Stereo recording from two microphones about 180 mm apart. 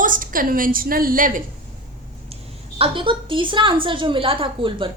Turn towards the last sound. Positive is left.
turn(degrees=-30)  # may be behind; listen again after turning